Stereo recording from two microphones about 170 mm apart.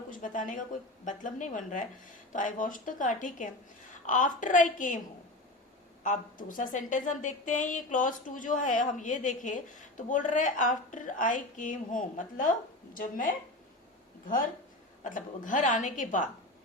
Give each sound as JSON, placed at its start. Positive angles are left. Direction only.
{"t": 0.1, "sound": "a woman's voice", "side_deg": 50}
{"t": 6.0, "sound": "a woman's voice", "side_deg": 50}